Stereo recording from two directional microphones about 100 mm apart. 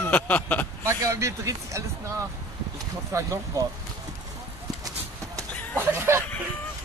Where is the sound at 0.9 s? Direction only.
30° right (ahead or behind).